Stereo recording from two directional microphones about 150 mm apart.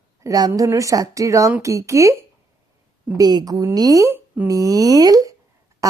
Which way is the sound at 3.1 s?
25° right (ahead or behind).